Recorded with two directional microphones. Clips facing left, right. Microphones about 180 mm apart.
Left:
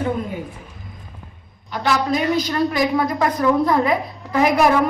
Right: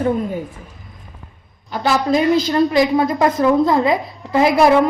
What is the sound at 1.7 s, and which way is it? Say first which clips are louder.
A woman's voice: right 3 dB; 35° right (ahead or behind).